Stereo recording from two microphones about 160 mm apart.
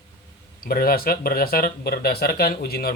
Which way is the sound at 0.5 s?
65° left (ahead or behind).